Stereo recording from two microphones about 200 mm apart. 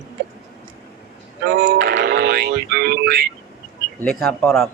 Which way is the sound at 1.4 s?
50° right (ahead or behind).